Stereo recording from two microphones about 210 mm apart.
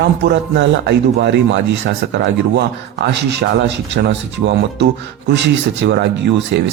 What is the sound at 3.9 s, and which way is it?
Speech, 60° right (ahead or behind).